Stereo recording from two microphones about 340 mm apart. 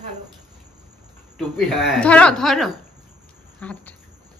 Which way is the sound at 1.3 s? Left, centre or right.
Centre.